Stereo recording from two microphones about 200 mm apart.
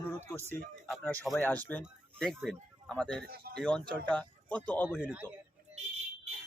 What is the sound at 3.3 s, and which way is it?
Speech, 50° right (ahead or behind).